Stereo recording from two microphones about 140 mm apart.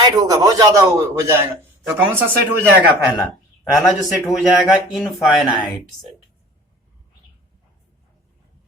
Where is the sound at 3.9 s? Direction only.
5° right (ahead or behind).